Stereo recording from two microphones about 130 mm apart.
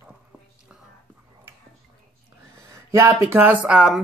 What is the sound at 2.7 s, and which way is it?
Speech, 25° right (ahead or behind).